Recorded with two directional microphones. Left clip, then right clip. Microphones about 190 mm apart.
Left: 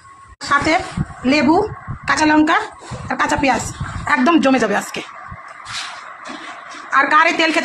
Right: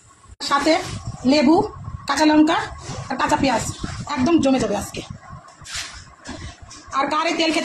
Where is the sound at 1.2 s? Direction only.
10° left (ahead or behind).